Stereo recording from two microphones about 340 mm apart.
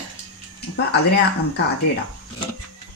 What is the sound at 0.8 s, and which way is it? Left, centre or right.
Speech, left.